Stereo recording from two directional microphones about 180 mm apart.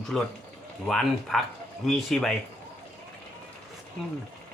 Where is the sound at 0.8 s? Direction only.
Centre (ahead or behind).